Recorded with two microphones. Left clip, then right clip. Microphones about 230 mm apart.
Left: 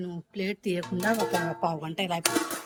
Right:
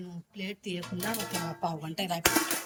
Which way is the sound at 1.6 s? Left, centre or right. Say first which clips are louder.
Left 4 dB; centre.